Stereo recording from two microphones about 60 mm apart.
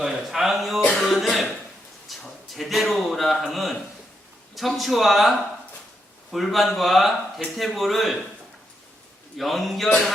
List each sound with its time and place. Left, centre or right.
0.0 s a man's voice: centre
0.9 s cough: centre
2.1 s a sound: centre
2.6 s a man's voice: centre
6.3 s a man's voice: centre
9.4 s a man's voice: centre